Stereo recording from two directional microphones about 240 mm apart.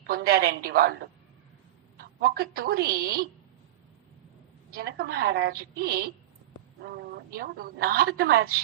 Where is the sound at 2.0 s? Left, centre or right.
Right.